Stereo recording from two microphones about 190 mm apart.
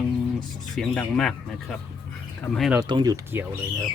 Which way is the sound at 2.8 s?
20° right (ahead or behind).